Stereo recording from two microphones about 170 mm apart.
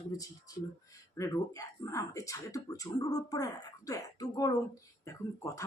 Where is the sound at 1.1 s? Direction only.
20° left (ahead or behind).